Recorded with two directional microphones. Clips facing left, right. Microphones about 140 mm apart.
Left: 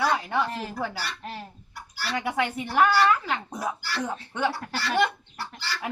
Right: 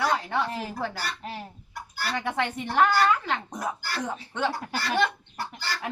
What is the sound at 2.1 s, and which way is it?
Speech, 10° left (ahead or behind).